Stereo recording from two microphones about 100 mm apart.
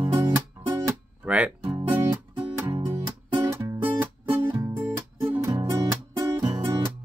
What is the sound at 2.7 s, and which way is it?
Music, 55° right (ahead or behind).